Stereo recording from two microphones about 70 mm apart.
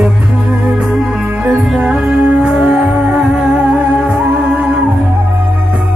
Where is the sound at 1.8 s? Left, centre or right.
Centre.